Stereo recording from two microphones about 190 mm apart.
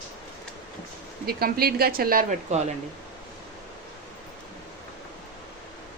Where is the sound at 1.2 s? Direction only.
55° right (ahead or behind).